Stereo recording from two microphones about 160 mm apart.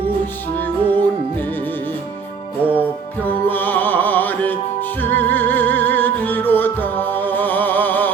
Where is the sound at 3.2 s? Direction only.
10° left (ahead or behind).